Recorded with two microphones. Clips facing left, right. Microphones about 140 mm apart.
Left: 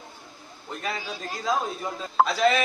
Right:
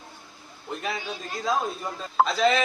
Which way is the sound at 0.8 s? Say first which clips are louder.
Left 1 dB; centre (ahead or behind).